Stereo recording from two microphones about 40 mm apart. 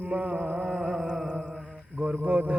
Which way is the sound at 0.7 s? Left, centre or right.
Centre.